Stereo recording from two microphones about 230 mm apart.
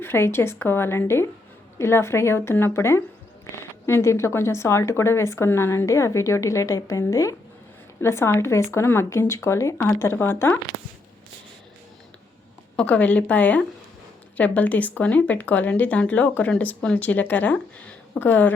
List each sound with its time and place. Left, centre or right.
0.0 s speech: centre
12.7 s a woman's voice: centre